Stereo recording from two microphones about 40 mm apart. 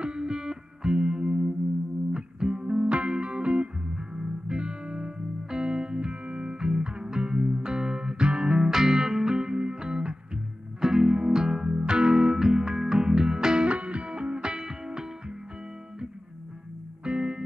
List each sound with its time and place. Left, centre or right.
0.0 s music: centre
13.7 s music: right
17.0 s music: right